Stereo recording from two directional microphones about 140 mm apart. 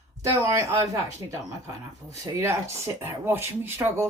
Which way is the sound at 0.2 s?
25° right (ahead or behind).